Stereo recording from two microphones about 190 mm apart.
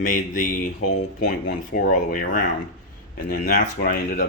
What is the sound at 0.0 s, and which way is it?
Speech, 45° left (ahead or behind).